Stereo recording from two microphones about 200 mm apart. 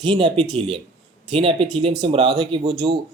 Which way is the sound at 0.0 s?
25° right (ahead or behind).